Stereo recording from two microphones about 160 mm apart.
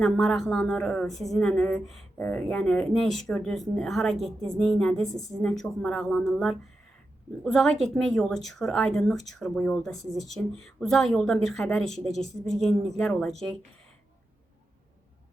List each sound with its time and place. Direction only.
0.0 s speech: centre (ahead or behind)